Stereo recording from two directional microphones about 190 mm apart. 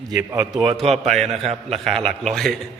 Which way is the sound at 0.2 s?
10° right (ahead or behind).